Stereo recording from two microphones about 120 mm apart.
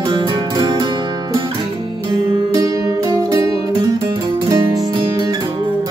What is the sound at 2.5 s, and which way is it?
Music, 30° right (ahead or behind).